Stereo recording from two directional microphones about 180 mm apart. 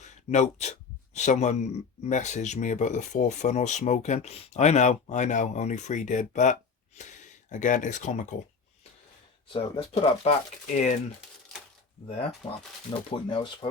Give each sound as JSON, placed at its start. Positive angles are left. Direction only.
{"t": 0.0, "sound": "speech", "side_deg": 40}
{"t": 9.5, "sound": "speech", "side_deg": 30}
{"t": 12.4, "sound": "speech", "side_deg": 30}